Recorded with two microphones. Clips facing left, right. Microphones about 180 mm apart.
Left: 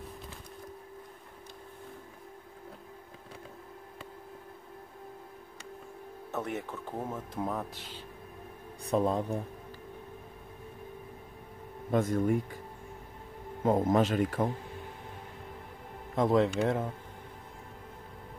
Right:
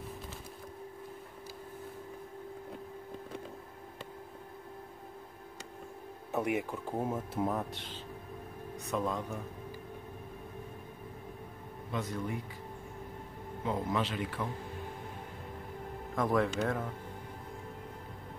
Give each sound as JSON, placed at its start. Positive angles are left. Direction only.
{"t": 6.3, "sound": "speech", "side_deg": -10}
{"t": 8.8, "sound": "speech", "side_deg": 35}
{"t": 11.9, "sound": "speech", "side_deg": 50}
{"t": 13.7, "sound": "speech", "side_deg": 45}
{"t": 16.2, "sound": "speech", "side_deg": 25}